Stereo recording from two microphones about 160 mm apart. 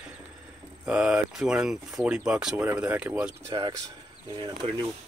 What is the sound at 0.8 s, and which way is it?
Speech, 5° right (ahead or behind).